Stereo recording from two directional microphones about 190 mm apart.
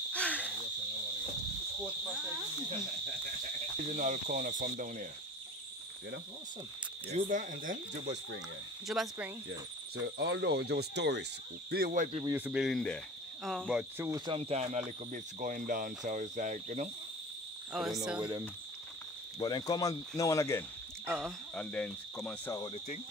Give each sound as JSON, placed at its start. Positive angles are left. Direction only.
{"t": 0.1, "sound": "cricket", "side_deg": 5}
{"t": 3.8, "sound": "cricket", "side_deg": -40}
{"t": 7.1, "sound": "speech", "side_deg": -40}
{"t": 8.8, "sound": "speech", "side_deg": 0}
{"t": 10.0, "sound": "speech", "side_deg": -65}
{"t": 11.7, "sound": "speech", "side_deg": -45}
{"t": 12.3, "sound": "speech", "side_deg": -10}
{"t": 14.0, "sound": "speech", "side_deg": -20}
{"t": 17.7, "sound": "speech", "side_deg": 0}
{"t": 19.4, "sound": "speech", "side_deg": 20}